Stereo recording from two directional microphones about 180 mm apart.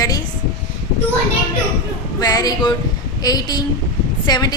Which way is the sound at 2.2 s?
20° left (ahead or behind).